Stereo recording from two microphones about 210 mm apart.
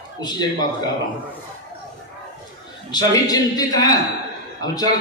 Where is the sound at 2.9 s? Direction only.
20° left (ahead or behind).